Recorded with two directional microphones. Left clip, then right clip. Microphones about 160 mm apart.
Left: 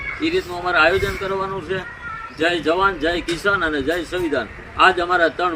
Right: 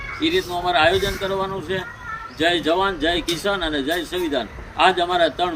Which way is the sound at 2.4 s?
50° right (ahead or behind).